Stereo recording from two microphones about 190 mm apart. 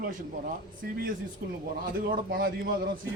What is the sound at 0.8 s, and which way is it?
Speech, 55° right (ahead or behind).